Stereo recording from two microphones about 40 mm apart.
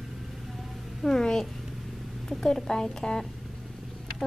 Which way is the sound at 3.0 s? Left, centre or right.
Left.